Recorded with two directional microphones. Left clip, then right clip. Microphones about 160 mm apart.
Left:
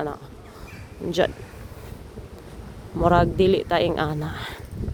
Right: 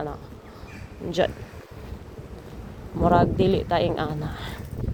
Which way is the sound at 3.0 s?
50° left (ahead or behind).